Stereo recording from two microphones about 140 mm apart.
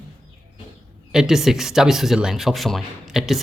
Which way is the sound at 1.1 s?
5° right (ahead or behind).